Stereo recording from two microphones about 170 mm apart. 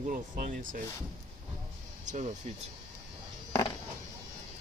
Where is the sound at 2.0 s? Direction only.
45° right (ahead or behind).